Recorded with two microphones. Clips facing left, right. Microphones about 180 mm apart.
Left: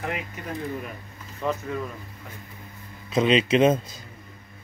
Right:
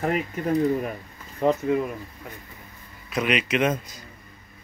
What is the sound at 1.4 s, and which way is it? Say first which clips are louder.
Speech: right 7 dB; 25° right (ahead or behind).